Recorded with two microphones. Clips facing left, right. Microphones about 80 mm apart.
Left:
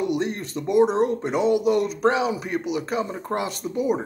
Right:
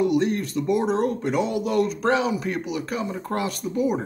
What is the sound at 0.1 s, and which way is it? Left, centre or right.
Speech, left.